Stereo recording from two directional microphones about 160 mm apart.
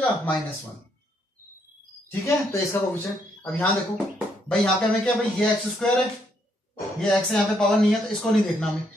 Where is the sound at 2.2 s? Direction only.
20° left (ahead or behind).